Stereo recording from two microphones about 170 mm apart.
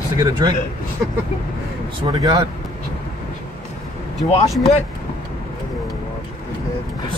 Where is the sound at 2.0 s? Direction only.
20° right (ahead or behind).